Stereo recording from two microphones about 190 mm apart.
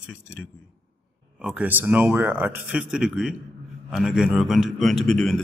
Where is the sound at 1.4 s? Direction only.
5° right (ahead or behind).